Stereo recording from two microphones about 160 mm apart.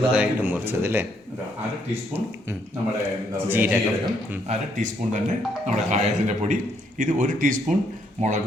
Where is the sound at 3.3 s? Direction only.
10° right (ahead or behind).